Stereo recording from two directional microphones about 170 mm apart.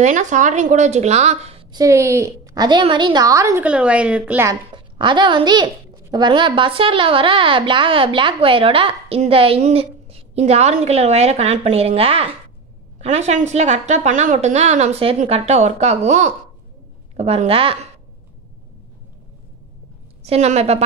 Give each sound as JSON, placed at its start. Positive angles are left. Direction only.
{"t": 0.0, "sound": "a woman's voice", "side_deg": -45}
{"t": 1.7, "sound": "a woman's voice", "side_deg": -20}
{"t": 3.6, "sound": "a woman's voice", "side_deg": -5}
{"t": 4.7, "sound": "a woman's voice", "side_deg": -30}
{"t": 20.2, "sound": "a woman's voice", "side_deg": -40}